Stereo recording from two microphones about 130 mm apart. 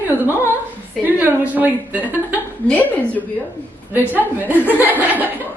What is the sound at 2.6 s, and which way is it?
Speech, 10° left (ahead or behind).